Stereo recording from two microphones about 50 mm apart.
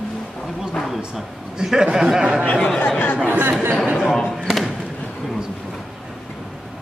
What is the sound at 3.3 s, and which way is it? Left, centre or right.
Speech, right.